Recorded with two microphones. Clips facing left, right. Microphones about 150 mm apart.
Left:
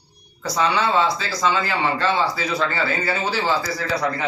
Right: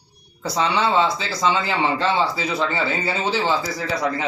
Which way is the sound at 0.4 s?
25° right (ahead or behind).